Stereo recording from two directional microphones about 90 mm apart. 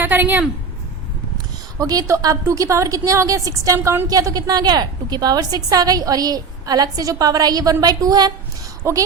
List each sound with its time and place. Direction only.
0.0 s a woman's voice: 20° right (ahead or behind)
1.8 s a woman's voice: 40° right (ahead or behind)
8.8 s a woman's voice: 40° right (ahead or behind)